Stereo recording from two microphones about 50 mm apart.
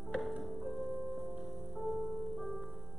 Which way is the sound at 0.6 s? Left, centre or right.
Centre.